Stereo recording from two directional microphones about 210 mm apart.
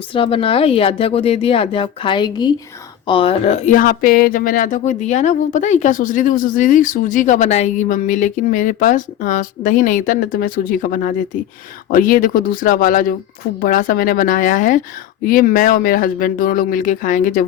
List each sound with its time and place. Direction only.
0.1 s speech: 25° left (ahead or behind)